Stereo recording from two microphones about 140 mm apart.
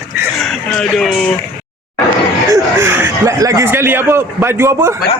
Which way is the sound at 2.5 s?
20° right (ahead or behind).